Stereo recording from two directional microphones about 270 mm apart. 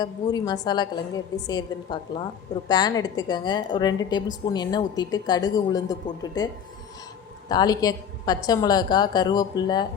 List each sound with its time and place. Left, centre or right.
0.0 s a woman's voice: centre